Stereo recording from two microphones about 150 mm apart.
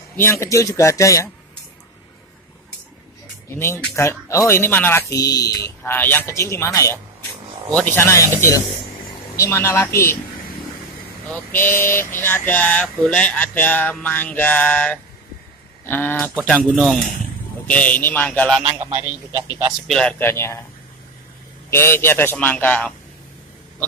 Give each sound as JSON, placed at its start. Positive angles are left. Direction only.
{"t": 0.1, "sound": "a man's voice", "side_deg": 15}
{"t": 3.4, "sound": "speech", "side_deg": 15}
{"t": 9.4, "sound": "speech", "side_deg": 15}
{"t": 11.2, "sound": "speech", "side_deg": 15}
{"t": 18.6, "sound": "a man's voice", "side_deg": -40}
{"t": 19.9, "sound": "speech", "side_deg": 5}
{"t": 21.6, "sound": "speech", "side_deg": 15}